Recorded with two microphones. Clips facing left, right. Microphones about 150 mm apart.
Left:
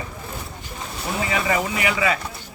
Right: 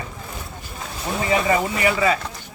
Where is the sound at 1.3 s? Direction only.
40° right (ahead or behind).